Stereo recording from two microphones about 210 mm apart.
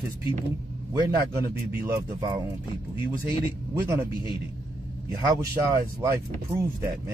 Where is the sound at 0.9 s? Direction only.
15° right (ahead or behind).